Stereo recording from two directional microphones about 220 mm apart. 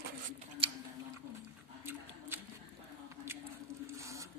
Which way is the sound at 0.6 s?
25° right (ahead or behind).